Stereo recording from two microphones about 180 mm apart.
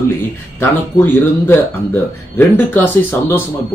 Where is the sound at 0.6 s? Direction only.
10° left (ahead or behind).